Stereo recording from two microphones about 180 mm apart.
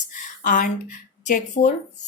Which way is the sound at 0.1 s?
45° left (ahead or behind).